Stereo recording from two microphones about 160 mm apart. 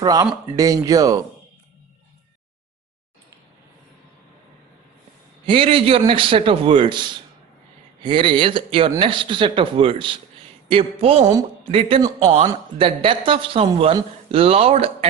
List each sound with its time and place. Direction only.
0.0 s speech: 25° right (ahead or behind)
5.5 s speech: 35° right (ahead or behind)